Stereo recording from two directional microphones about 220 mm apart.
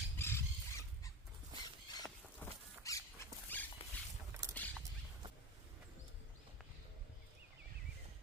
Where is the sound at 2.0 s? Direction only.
10° left (ahead or behind).